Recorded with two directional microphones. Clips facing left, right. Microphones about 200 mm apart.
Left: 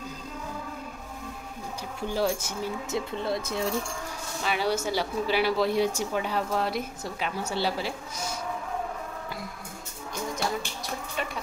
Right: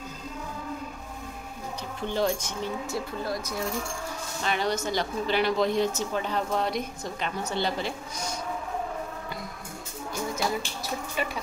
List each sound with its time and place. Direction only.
2.0 s speech: 10° left (ahead or behind)
2.9 s speech: 25° left (ahead or behind)
4.4 s speech: 5° left (ahead or behind)